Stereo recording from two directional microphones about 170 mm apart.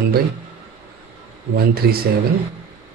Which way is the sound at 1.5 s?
65° right (ahead or behind).